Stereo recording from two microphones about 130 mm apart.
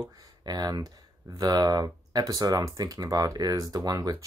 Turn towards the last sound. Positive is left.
turn(degrees=-30)  # may be behind; listen again after turning